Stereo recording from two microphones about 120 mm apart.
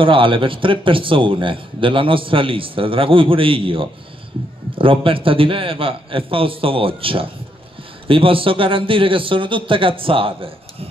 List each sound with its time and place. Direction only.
0.0 s speech: 45° right (ahead or behind)